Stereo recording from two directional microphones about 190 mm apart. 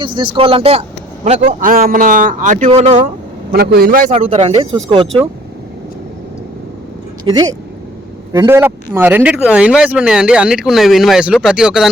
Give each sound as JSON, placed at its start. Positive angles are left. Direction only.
{"t": 0.0, "sound": "a man's voice", "side_deg": -25}
{"t": 3.5, "sound": "a man's voice", "side_deg": -55}
{"t": 4.1, "sound": "a man's voice", "side_deg": -35}
{"t": 7.3, "sound": "speech", "side_deg": -20}